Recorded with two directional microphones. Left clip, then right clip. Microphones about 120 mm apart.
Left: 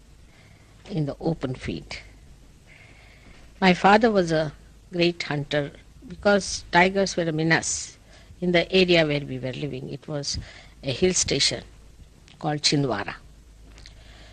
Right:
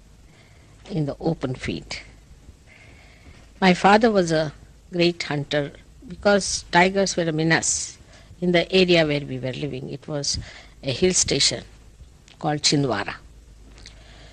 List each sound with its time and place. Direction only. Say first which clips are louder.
0.8 s speech: right 2 dB; 35° left (ahead or behind)
13.7 s vehicle: right 2 dB; 30° left (ahead or behind)